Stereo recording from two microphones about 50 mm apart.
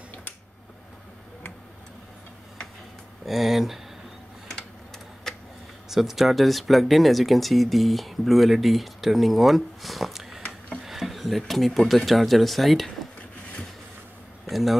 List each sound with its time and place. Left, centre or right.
3.3 s speech: centre
4.6 s tick-tock: centre
5.9 s speech: centre
10.9 s a sound: centre
11.9 s speech: centre
14.5 s speech: centre